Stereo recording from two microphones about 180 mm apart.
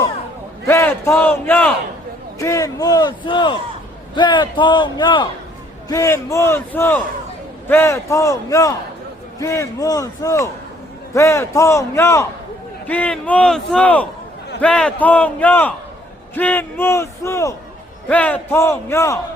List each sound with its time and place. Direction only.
0.7 s a man's voice: 15° left (ahead or behind)